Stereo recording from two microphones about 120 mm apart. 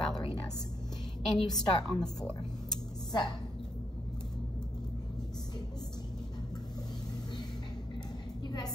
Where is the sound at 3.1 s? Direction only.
35° left (ahead or behind).